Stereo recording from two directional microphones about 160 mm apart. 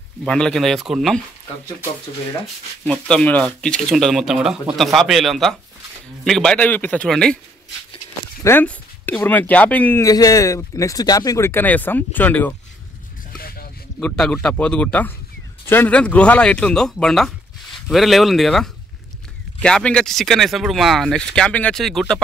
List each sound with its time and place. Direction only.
0.3 s speech: 5° left (ahead or behind)
2.8 s speech: 5° left (ahead or behind)
8.5 s speech: 10° left (ahead or behind)
10.0 s speech: 20° left (ahead or behind)
13.4 s a sound: 70° left (ahead or behind)
13.9 s speech: 5° left (ahead or behind)